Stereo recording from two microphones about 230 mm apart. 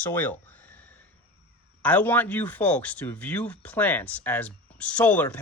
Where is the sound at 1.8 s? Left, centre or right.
Centre.